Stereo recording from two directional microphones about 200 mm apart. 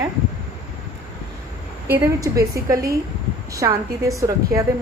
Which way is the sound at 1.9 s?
15° right (ahead or behind).